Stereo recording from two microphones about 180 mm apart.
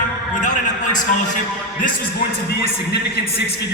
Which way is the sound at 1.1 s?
45° left (ahead or behind).